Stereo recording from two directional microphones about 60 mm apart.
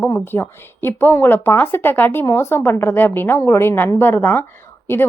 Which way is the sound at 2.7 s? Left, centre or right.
Left.